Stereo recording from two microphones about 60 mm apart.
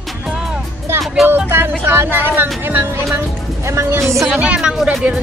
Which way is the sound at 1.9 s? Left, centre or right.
Right.